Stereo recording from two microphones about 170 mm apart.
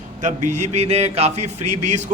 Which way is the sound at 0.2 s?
45° right (ahead or behind).